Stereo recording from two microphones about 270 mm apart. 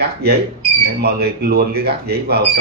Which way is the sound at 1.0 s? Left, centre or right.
Right.